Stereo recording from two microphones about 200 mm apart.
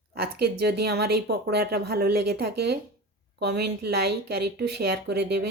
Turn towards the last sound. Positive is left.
turn(degrees=-55)  # may be behind; listen again after turning